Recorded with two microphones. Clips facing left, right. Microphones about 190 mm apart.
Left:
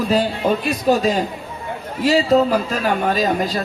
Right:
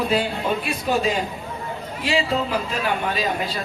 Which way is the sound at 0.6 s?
40° left (ahead or behind).